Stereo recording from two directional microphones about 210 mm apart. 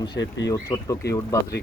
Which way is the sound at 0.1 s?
55° left (ahead or behind).